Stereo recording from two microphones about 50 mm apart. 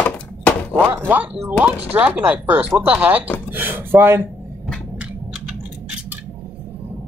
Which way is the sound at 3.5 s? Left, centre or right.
Right.